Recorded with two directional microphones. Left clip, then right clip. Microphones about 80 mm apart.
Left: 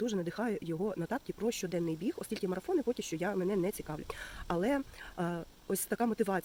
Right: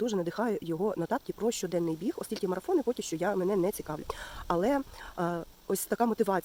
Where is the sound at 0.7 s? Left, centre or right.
Right.